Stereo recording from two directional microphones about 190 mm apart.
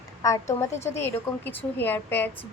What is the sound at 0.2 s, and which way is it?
A woman's voice, 15° left (ahead or behind).